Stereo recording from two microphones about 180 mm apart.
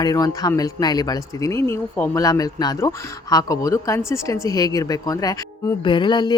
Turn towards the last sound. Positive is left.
turn(degrees=25)  # may be behind; listen again after turning